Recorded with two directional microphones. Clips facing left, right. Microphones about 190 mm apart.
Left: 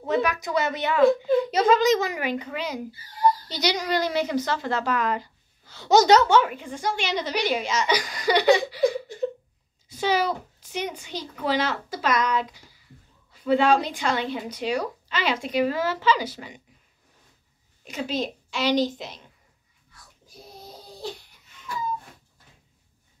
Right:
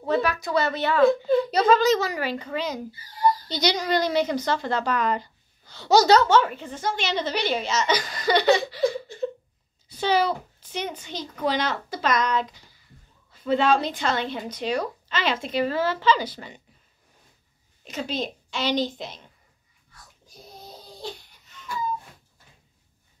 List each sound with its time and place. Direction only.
0.1 s a woman's voice: 15° left (ahead or behind)
5.9 s a woman's voice: 15° left (ahead or behind)
17.8 s a woman's voice: 10° left (ahead or behind)